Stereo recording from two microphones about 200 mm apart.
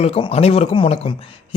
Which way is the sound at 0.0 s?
30° left (ahead or behind).